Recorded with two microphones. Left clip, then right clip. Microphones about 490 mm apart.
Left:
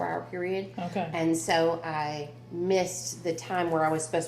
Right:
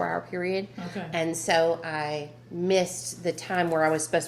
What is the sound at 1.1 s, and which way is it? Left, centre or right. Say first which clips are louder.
A woman's voice: right 2 dB; right.